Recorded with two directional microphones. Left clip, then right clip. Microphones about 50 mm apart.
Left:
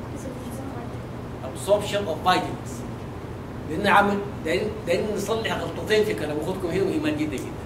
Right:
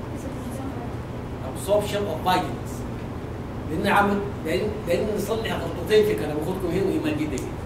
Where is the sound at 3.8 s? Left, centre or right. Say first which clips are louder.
Left 2 dB; left.